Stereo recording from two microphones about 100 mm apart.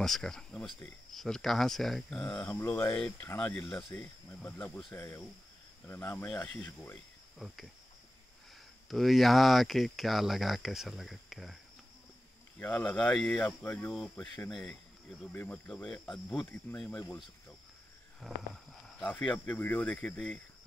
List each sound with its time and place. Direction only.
0.0 s speech: 5° left (ahead or behind)
2.5 s speech: 25° left (ahead or behind)
3.3 s speech: 10° left (ahead or behind)
4.9 s speech: 25° left (ahead or behind)
7.3 s speech: centre (ahead or behind)
8.8 s speech: centre (ahead or behind)
12.5 s speech: 15° left (ahead or behind)
14.5 s speech: 5° left (ahead or behind)
15.3 s speech: 15° left (ahead or behind)
18.2 s speech: centre (ahead or behind)
19.3 s speech: 20° left (ahead or behind)